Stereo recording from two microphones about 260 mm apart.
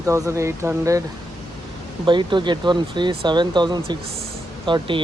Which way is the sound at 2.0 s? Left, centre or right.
Centre.